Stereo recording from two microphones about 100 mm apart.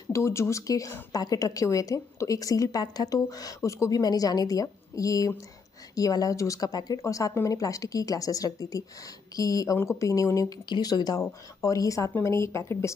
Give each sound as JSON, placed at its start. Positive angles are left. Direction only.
{"t": 0.1, "sound": "a woman's voice", "side_deg": 30}